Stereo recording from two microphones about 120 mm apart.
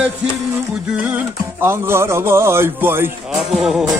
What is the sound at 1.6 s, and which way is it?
A man's voice, 20° right (ahead or behind).